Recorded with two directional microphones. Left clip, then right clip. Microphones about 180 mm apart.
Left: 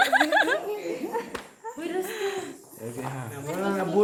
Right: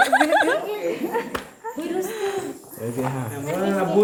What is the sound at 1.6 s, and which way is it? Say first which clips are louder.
Dog: right 3 dB; centre (ahead or behind).